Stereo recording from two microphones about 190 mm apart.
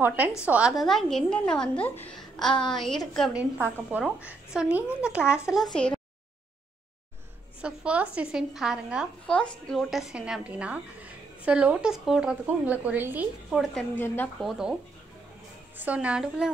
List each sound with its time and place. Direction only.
0.0 s a woman's voice: 10° right (ahead or behind)
2.5 s a woman's voice: 25° left (ahead or behind)
3.2 s a woman's voice: 5° right (ahead or behind)
7.6 s a woman's voice: 5° right (ahead or behind)
13.9 s speech: 10° left (ahead or behind)
14.4 s a woman's voice: 5° right (ahead or behind)
15.8 s a woman's voice: 5° right (ahead or behind)